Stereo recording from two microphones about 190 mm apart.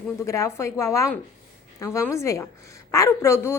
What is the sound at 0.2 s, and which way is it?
A woman's voice, 15° left (ahead or behind).